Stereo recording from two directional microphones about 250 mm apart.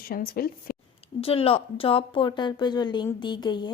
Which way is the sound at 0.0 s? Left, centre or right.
Left.